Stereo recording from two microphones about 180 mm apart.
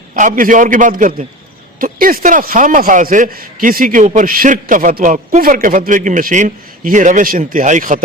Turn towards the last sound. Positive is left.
turn(degrees=-45)  # may be behind; listen again after turning